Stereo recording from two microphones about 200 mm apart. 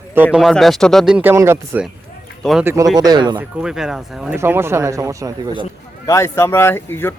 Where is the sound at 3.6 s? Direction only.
5° right (ahead or behind).